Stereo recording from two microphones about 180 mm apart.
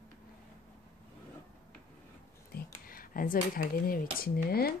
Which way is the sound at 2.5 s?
50° left (ahead or behind).